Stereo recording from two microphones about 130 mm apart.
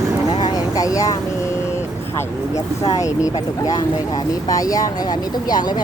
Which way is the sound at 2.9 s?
25° left (ahead or behind).